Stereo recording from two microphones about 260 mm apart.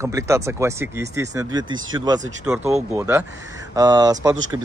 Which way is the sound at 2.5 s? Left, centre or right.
Centre.